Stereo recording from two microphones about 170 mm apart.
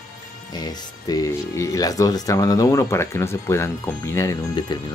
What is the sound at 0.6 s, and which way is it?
Speech, 20° left (ahead or behind).